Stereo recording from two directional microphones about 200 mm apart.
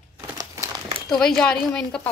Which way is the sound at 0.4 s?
20° right (ahead or behind).